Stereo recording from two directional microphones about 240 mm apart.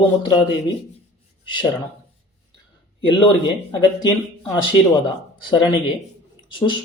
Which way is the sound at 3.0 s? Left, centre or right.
Centre.